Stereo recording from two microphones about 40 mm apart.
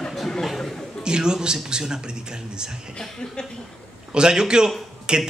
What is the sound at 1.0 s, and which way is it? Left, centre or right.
A man's voice, right.